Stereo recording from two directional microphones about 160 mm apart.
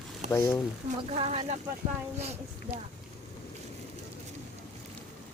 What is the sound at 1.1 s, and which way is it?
A child's voice, 40° right (ahead or behind).